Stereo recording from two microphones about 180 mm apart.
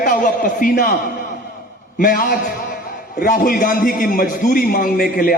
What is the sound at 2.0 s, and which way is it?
A man's voice, 50° left (ahead or behind).